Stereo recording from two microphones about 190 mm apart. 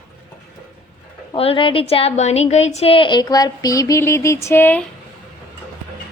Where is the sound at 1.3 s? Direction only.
30° left (ahead or behind); by 4.8 s 10° left (ahead or behind).